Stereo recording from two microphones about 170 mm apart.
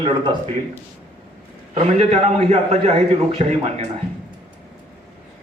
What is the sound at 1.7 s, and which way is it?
A man's voice, 40° right (ahead or behind).